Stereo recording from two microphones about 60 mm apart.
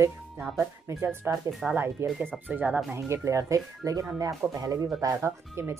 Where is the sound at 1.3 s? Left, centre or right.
Right.